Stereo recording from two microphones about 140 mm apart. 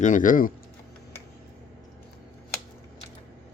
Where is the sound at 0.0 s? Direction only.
65° left (ahead or behind).